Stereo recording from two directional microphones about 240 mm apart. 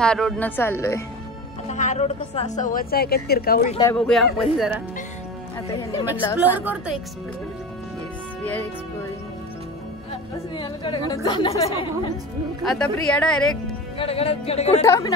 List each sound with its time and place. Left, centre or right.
0.0 s a woman's voice: centre
1.7 s speech: left
3.6 s a woman's voice: left
3.9 s speech: centre
6.5 s a woman's voice: centre
10.5 s a woman's voice: centre
12.6 s speech: centre
13.9 s a woman's voice: left
14.9 s a woman's voice: centre